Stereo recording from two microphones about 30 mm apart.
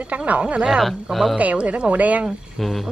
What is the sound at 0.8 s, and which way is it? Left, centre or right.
Speech, centre.